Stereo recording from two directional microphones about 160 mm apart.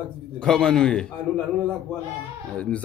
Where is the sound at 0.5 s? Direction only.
5° left (ahead or behind).